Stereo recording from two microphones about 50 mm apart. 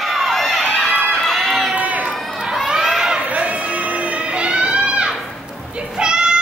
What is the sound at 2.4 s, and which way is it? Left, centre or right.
Crowd, centre.